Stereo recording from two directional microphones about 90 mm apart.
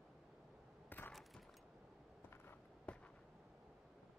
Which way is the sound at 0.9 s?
20° left (ahead or behind).